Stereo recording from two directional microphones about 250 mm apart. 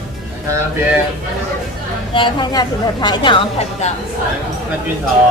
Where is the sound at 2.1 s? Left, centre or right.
Centre.